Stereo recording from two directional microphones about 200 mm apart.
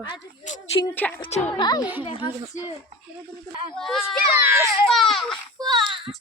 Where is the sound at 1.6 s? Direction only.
20° left (ahead or behind).